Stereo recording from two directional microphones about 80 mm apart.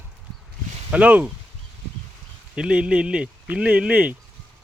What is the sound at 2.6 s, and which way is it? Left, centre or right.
Speech, centre.